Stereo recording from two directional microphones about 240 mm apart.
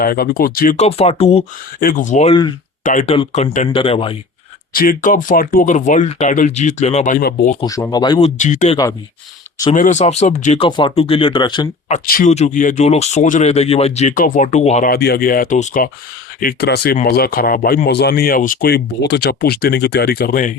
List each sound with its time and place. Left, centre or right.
0.0 s speech: left
1.8 s speech: left; by 2.6 s centre
2.8 s speech: left
4.7 s speech: left
7.6 s speech: centre
8.4 s speech: left
11.9 s speech: left